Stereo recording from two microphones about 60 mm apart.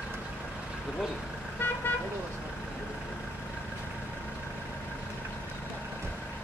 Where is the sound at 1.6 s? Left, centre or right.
Left.